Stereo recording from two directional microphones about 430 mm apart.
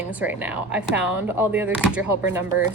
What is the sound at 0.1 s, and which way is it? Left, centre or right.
Speech, centre.